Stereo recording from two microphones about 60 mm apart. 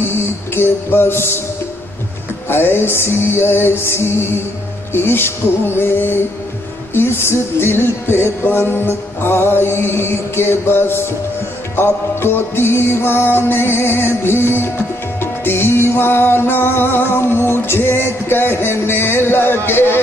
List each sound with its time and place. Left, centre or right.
0.6 s music: left
2.5 s music: left